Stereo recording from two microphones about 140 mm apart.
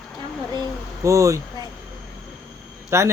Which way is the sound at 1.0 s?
20° right (ahead or behind).